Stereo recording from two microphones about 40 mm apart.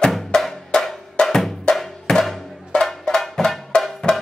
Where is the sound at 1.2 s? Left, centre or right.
Left.